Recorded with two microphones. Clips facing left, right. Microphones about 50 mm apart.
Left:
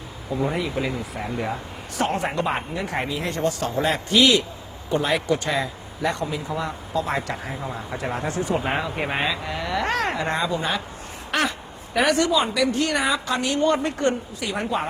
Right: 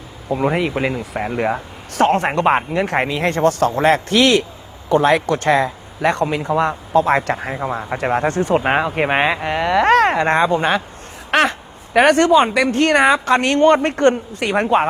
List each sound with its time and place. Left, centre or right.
0.5 s speech: right
11.3 s a sound: right
11.9 s a woman's voice: right